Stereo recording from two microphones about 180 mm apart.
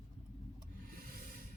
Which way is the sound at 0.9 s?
50° right (ahead or behind).